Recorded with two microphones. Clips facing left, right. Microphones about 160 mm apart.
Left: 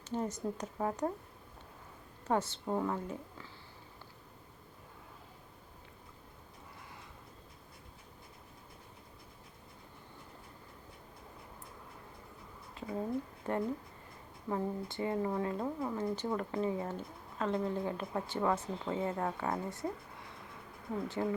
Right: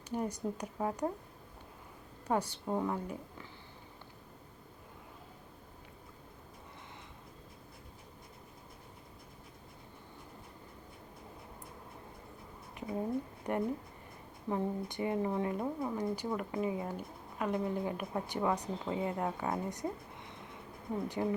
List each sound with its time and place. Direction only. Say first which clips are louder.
0.1 s speech: even; 10° right (ahead or behind)
2.2 s speech: even; 15° right (ahead or behind)
12.7 s speech: right 1 dB; 20° right (ahead or behind)